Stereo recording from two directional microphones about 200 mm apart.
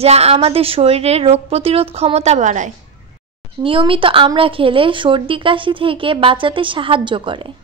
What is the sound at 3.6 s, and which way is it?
Speech, 25° right (ahead or behind).